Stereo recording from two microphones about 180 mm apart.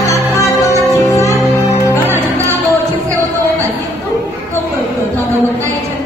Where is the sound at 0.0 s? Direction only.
15° left (ahead or behind).